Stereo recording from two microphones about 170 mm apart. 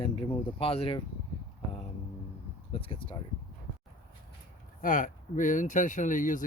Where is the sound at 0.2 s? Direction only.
35° left (ahead or behind).